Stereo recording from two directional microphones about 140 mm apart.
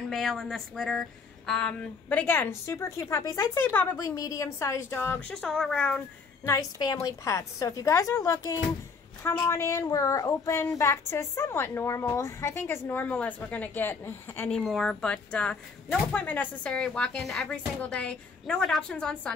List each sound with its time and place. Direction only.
0.1 s speech: centre (ahead or behind)
3.9 s a woman's voice: 25° left (ahead or behind)
5.3 s a woman's voice: 5° left (ahead or behind)
6.8 s a woman's voice: 25° left (ahead or behind)
14.5 s speech: centre (ahead or behind)